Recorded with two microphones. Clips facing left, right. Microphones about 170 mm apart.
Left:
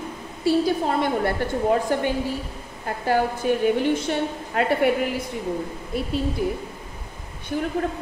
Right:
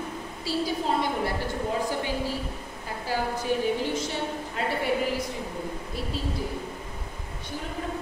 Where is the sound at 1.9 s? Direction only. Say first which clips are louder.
Left 6 dB; 60° left (ahead or behind).